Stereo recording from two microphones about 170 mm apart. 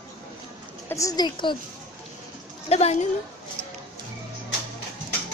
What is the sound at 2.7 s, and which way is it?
Speech, 40° left (ahead or behind).